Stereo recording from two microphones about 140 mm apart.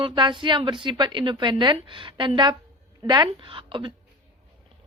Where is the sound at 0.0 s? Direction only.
35° right (ahead or behind).